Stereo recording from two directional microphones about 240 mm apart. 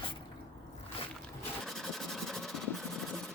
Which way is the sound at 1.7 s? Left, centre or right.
Centre.